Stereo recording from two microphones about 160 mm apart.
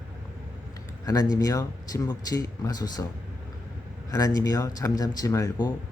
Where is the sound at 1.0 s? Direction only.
25° left (ahead or behind).